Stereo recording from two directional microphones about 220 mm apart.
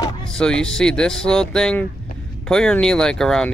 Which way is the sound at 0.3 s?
5° left (ahead or behind).